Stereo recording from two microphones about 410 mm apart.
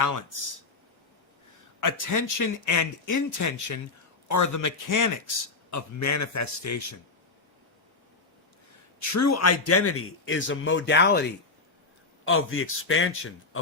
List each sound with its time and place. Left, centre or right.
1.8 s a man's voice: left
9.0 s a man's voice: left